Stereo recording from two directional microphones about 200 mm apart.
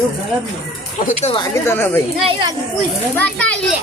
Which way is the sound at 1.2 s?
25° left (ahead or behind).